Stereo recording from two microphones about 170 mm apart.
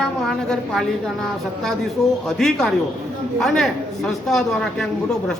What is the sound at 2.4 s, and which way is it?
Speech, centre (ahead or behind).